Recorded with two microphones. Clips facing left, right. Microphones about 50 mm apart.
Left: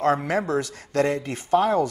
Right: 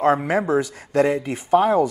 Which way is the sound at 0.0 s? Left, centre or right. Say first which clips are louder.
Right 3 dB; centre.